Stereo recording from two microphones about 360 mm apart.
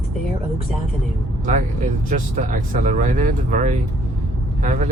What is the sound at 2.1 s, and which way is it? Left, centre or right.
Speech, right.